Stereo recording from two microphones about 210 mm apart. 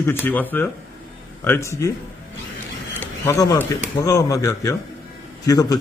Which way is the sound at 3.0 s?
15° left (ahead or behind).